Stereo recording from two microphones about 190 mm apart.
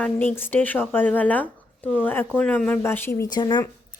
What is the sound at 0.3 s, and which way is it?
Speech, 10° left (ahead or behind).